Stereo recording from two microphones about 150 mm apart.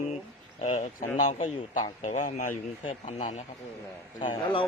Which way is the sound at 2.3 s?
60° left (ahead or behind).